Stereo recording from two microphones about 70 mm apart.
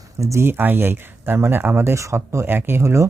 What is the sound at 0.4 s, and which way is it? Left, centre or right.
Speech, right.